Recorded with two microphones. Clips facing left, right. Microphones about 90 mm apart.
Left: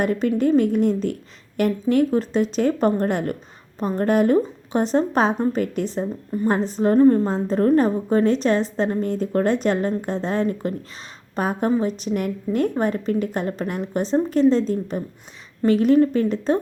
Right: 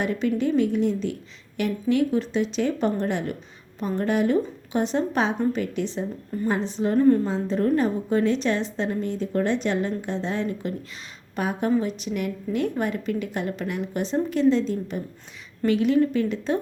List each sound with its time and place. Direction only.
0.0 s a woman's voice: 45° left (ahead or behind)